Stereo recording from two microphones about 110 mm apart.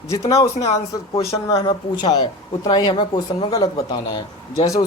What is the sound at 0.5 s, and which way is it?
Speech, 80° left.